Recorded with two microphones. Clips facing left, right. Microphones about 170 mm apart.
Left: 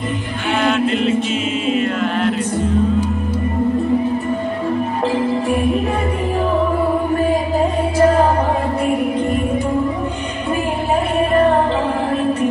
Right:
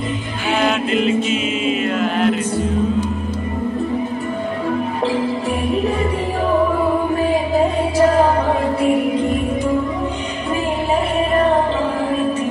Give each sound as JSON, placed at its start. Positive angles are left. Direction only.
{"t": 0.6, "sound": "music", "side_deg": -5}